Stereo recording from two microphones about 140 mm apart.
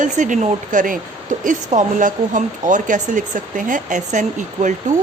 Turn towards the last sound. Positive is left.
turn(degrees=-65)  # may be behind; listen again after turning